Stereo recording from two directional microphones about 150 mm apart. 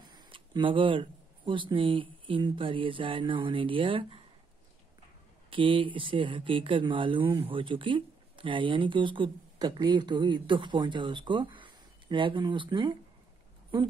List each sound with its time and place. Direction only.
0.0 s speech: 30° right (ahead or behind)
5.5 s speech: 35° right (ahead or behind)